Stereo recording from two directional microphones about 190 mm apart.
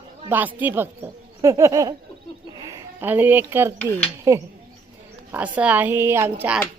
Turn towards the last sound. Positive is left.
turn(degrees=-10)  # may be behind; listen again after turning